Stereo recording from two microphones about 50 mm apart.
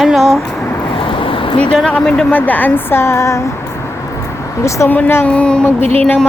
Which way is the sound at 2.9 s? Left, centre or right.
Left.